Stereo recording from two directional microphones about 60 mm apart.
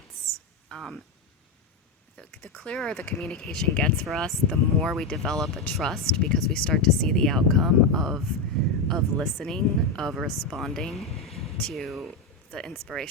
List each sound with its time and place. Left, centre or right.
0.7 s speech: centre
2.2 s speech: centre
12.5 s speech: centre
12.7 s speech: centre